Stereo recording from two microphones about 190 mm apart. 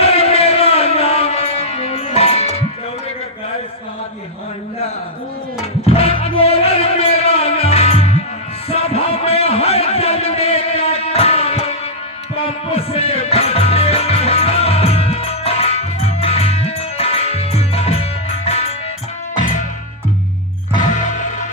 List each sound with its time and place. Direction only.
0.0 s music: 30° left (ahead or behind)
5.8 s music: 30° left (ahead or behind)
8.7 s a sound: 30° left (ahead or behind)
12.5 s music: 30° left (ahead or behind)
20.9 s music: 40° left (ahead or behind)